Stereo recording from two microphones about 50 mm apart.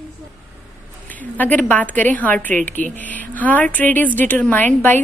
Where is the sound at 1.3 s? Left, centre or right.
Left.